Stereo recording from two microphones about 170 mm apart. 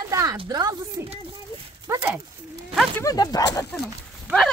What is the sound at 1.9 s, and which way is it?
Dog, 15° right (ahead or behind).